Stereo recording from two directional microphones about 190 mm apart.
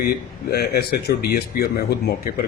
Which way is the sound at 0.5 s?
55° left (ahead or behind).